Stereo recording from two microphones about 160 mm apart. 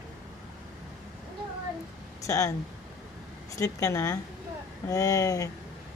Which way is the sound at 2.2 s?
20° left (ahead or behind).